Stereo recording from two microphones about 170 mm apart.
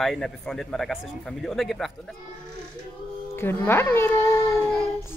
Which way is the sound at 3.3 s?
15° left (ahead or behind).